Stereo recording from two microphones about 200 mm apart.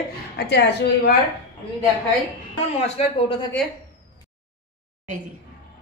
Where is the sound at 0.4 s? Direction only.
55° left (ahead or behind).